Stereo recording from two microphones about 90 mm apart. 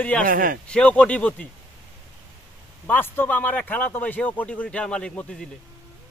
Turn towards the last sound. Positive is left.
turn(degrees=10)  # may be behind; listen again after turning